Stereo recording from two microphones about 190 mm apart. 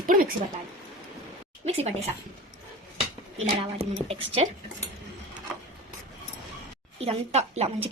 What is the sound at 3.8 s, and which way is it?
Speech, 30° right (ahead or behind).